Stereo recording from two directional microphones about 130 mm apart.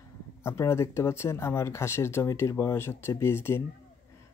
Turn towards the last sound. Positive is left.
turn(degrees=20)  # may be behind; listen again after turning